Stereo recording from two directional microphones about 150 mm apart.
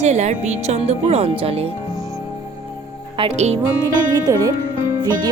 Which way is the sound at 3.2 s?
35° right (ahead or behind).